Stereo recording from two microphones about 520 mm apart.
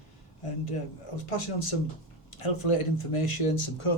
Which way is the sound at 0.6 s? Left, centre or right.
Left.